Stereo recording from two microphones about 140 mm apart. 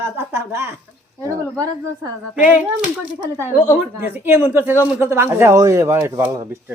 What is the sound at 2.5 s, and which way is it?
Speech, 10° right (ahead or behind).